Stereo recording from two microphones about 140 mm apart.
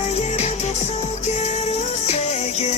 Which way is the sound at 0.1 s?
50° left (ahead or behind).